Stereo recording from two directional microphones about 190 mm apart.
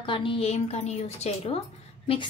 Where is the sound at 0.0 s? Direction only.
25° left (ahead or behind).